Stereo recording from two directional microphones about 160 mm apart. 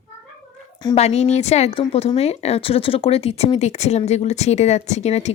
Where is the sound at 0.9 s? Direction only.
40° left (ahead or behind).